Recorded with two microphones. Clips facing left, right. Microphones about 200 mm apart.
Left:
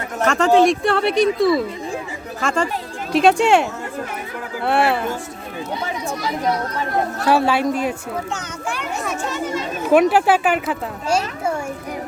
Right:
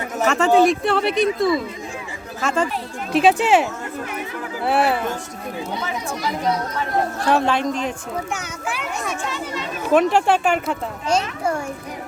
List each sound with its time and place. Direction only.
0.2 s a child's voice: 5° right (ahead or behind)
7.2 s speech: 5° left (ahead or behind)
8.3 s speech: 5° right (ahead or behind)
9.3 s a child's voice: 45° left (ahead or behind)
9.9 s a child's voice: 5° left (ahead or behind)